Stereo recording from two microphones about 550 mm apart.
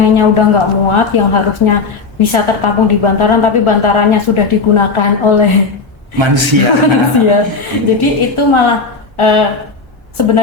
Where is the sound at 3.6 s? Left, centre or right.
Left.